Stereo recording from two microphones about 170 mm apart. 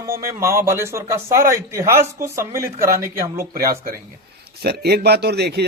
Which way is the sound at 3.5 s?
60° right (ahead or behind).